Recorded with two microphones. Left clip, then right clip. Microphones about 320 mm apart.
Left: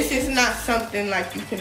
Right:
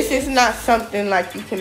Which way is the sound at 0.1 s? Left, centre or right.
Right.